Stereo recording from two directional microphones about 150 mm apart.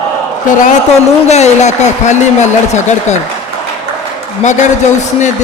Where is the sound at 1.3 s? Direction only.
45° left (ahead or behind).